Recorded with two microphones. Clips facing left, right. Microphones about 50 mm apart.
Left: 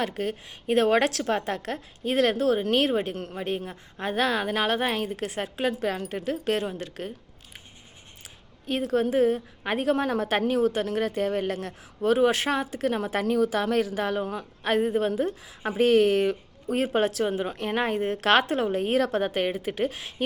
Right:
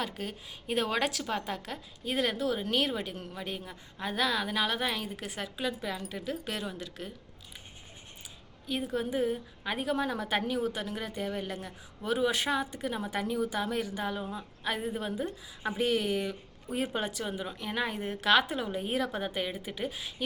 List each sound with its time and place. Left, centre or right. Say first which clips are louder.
0.0 s a woman's voice: left 8 dB; left
5.1 s a woman's voice: left 7 dB; left
8.8 s a woman's voice: left 9 dB; left
15.2 s a woman's voice: left 8 dB; left
15.8 s a woman's voice: left 10 dB; left